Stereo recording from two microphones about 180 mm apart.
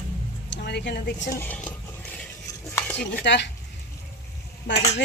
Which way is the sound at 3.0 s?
75° left (ahead or behind).